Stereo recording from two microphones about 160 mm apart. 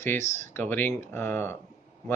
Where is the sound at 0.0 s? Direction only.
15° left (ahead or behind).